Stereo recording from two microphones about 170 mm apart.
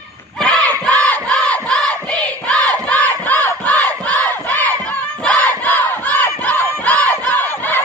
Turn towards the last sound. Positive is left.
turn(degrees=10)  # may be behind; listen again after turning